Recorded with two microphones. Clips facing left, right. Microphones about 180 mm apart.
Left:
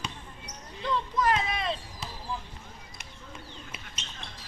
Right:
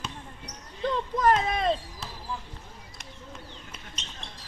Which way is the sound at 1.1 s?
50° right (ahead or behind).